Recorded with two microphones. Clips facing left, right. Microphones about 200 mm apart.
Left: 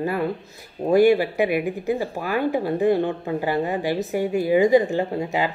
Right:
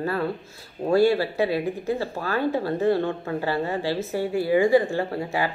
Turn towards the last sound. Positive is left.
turn(degrees=20)  # may be behind; listen again after turning